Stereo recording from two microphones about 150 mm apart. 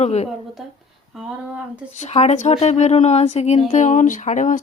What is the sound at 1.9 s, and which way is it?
Speech, 50° left (ahead or behind).